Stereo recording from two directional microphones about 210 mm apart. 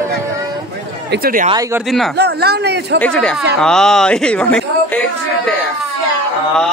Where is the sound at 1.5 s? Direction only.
15° right (ahead or behind).